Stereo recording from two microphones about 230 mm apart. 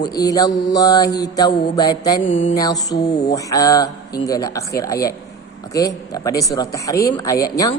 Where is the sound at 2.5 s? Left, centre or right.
Centre.